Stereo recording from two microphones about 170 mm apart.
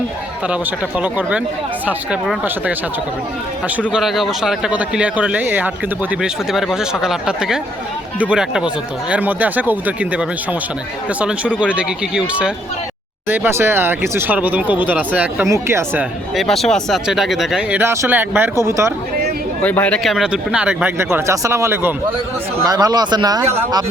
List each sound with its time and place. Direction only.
0.4 s speech: 10° right (ahead or behind)
3.9 s speech: centre (ahead or behind)
16.3 s speech: centre (ahead or behind); by 18.9 s 15° right (ahead or behind)
19.6 s speech: 10° left (ahead or behind); by 23.8 s 25° right (ahead or behind)